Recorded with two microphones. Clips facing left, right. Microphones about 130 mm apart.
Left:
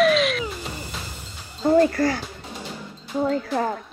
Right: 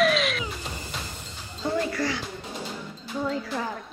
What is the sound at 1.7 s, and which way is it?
Speech, 45° left (ahead or behind).